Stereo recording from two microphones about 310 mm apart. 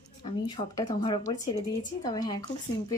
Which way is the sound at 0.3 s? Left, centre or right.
Centre.